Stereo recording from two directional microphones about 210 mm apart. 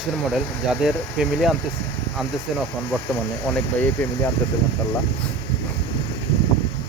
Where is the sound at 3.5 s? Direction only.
10° left (ahead or behind).